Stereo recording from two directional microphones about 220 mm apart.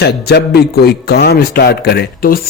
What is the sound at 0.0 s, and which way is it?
A man's voice, 45° left (ahead or behind).